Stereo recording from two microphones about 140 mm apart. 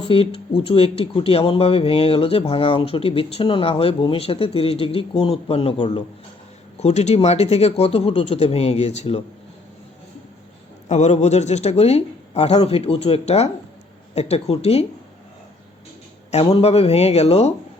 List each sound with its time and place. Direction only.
0.1 s speech: 40° left (ahead or behind)
6.8 s speech: 50° left (ahead or behind)
10.8 s speech: 55° left (ahead or behind)
16.3 s speech: 45° left (ahead or behind)